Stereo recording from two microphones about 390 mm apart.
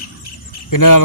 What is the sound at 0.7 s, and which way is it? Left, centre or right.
Speech, left.